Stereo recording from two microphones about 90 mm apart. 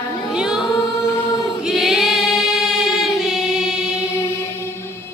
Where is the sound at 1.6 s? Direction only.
5° right (ahead or behind).